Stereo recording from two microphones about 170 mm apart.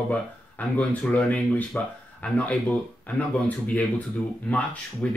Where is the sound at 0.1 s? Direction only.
10° left (ahead or behind).